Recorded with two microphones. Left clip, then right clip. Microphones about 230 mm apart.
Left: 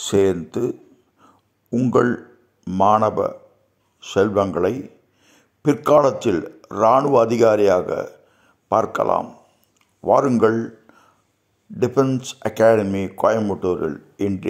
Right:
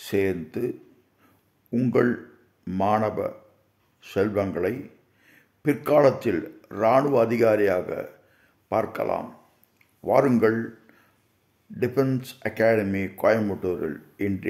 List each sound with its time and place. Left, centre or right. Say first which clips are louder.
0.0 s speech: left 7 dB; centre
4.0 s a sound: left 7 dB; centre
5.9 s speech: left 4 dB; centre
11.8 s speech: left 6 dB; centre